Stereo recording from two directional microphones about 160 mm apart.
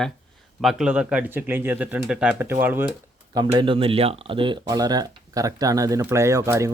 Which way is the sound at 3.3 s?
25° right (ahead or behind).